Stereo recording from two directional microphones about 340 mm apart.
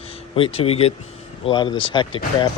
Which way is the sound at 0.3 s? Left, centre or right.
Centre.